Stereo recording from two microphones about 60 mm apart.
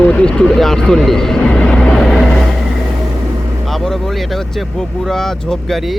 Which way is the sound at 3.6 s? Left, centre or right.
Centre.